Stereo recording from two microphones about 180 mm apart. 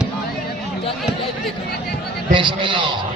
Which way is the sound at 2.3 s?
25° right (ahead or behind).